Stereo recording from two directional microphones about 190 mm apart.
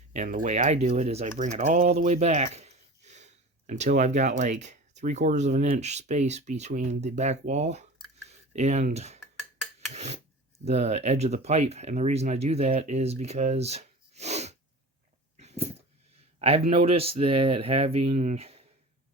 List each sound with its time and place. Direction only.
0.1 s speech: 40° right (ahead or behind)
15.4 s dog: 35° right (ahead or behind)
16.4 s speech: 30° right (ahead or behind)